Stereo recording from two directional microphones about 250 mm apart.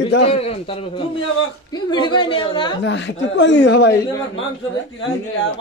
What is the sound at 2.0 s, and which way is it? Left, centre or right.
Speech, centre.